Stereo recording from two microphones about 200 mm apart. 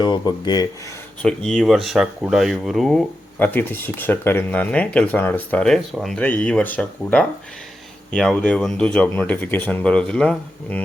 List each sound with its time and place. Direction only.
0.0 s speech: 20° left (ahead or behind)
1.2 s speech: 5° left (ahead or behind)